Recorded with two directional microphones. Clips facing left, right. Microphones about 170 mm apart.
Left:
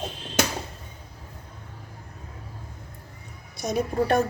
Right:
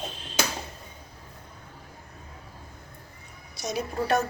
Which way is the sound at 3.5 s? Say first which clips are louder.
Left 5 dB; 50° left (ahead or behind).